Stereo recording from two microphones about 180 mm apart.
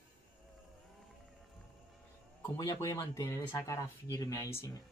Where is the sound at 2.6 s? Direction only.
20° left (ahead or behind).